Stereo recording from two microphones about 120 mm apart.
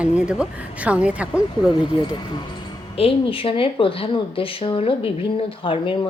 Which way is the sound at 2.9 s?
50° left (ahead or behind).